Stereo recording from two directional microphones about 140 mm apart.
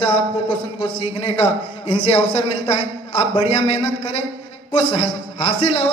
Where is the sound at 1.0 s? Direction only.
40° left (ahead or behind).